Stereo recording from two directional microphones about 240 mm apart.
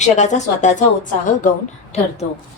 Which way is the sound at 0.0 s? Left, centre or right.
Left.